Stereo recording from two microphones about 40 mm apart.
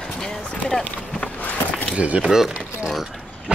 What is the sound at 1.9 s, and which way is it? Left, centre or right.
Speech, right.